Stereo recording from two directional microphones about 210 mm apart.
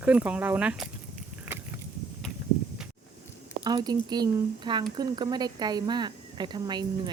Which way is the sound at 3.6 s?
20° right (ahead or behind).